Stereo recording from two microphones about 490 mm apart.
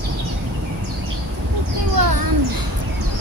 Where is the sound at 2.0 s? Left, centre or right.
Right.